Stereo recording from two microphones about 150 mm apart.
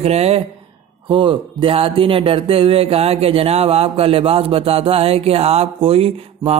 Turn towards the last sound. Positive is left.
turn(degrees=-40)  # may be behind; listen again after turning